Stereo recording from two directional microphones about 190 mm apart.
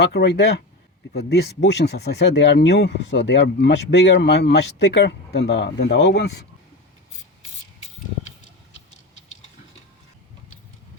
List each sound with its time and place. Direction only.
0.0 s speech: 65° left (ahead or behind)